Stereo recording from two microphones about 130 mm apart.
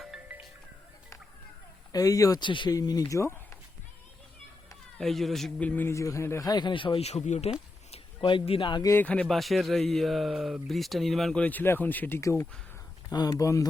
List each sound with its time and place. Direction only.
0.0 s music: 10° right (ahead or behind)
1.9 s a man's voice: 25° left (ahead or behind)
4.9 s a man's voice: centre (ahead or behind); by 7.5 s 60° left (ahead or behind)
7.9 s speech: 45° left (ahead or behind)
8.9 s speech: 15° left (ahead or behind)
9.2 s speech: centre (ahead or behind)
11.4 s a man's voice: 15° left (ahead or behind)